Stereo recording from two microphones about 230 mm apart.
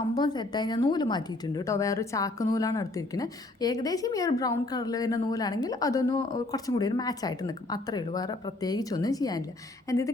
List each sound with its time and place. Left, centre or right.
0.1 s a woman's voice: centre